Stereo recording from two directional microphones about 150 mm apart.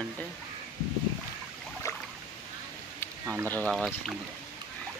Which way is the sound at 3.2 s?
15° right (ahead or behind).